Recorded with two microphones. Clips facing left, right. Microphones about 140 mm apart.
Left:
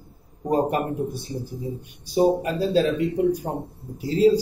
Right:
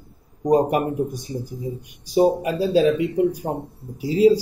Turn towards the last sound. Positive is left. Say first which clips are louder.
# right 2 dB
turn(degrees=-10)  # may be behind; listen again after turning